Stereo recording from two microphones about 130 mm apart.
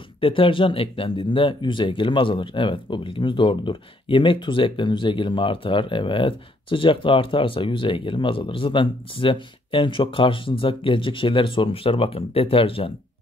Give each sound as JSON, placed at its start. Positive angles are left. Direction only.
{"t": 0.2, "sound": "speech", "side_deg": 40}